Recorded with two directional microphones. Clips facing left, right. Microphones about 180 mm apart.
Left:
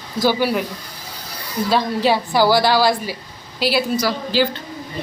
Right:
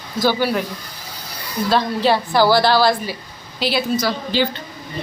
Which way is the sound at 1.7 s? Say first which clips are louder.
Right 1 dB; 10° left (ahead or behind).